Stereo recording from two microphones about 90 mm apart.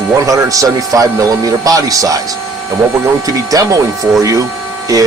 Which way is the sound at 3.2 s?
40° right (ahead or behind).